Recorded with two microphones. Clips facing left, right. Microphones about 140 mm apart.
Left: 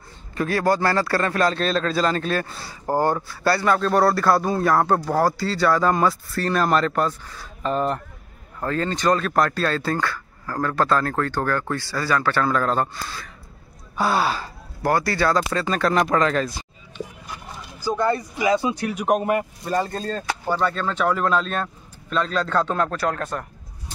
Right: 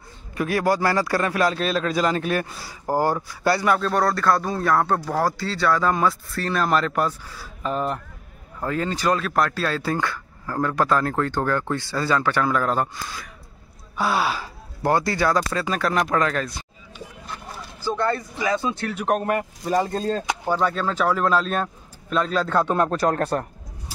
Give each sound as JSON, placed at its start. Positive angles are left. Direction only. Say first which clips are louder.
{"t": 0.3, "sound": "speech", "louder": "left 1 dB", "side_deg": -10}
{"t": 14.8, "sound": "speech", "louder": "even", "side_deg": -20}
{"t": 17.8, "sound": "speech", "louder": "left 2 dB", "side_deg": 15}
{"t": 23.0, "sound": "speech", "louder": "right 4 dB", "side_deg": -40}